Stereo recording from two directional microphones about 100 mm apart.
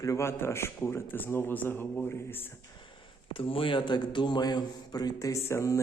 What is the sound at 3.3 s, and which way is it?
Speech, 65° left (ahead or behind).